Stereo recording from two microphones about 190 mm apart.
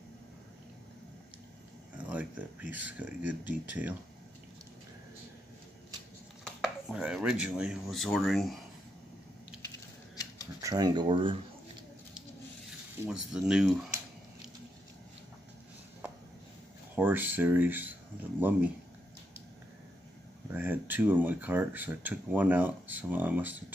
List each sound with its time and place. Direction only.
2.0 s speech: 10° right (ahead or behind)
6.4 s speech: 5° right (ahead or behind)
10.6 s speech: 20° right (ahead or behind)
13.0 s speech: 5° right (ahead or behind)
16.9 s speech: 10° right (ahead or behind)
20.5 s speech: 10° right (ahead or behind)